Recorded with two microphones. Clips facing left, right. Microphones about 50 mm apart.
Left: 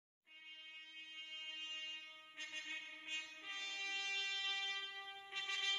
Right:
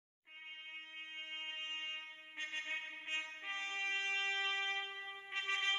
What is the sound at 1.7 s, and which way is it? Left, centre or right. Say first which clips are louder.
Music: right 5 dB; right.